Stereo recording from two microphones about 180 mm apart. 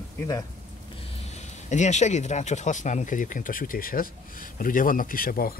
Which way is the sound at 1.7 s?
40° left (ahead or behind).